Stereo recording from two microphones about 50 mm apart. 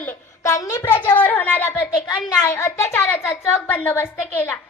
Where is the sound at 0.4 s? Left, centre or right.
Left.